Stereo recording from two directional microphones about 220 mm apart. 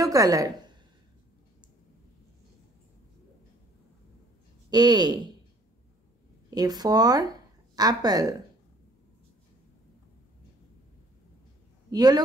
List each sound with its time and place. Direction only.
0.0 s a woman's voice: 15° right (ahead or behind)
4.6 s speech: 20° right (ahead or behind)
6.5 s speech: 20° right (ahead or behind)
11.9 s a woman's voice: 20° right (ahead or behind)